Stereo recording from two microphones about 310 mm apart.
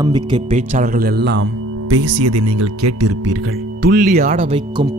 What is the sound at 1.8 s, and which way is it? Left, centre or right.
Speech, right.